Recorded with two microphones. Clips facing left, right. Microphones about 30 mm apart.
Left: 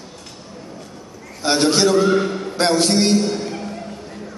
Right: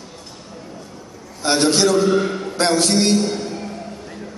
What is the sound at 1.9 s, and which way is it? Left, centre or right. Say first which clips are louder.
Speech: left 1 dB; left.